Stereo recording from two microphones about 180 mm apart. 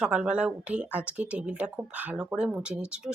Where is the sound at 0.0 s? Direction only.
5° right (ahead or behind).